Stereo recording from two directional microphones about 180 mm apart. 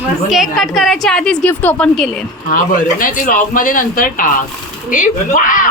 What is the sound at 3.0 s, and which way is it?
Speech, 50° left (ahead or behind).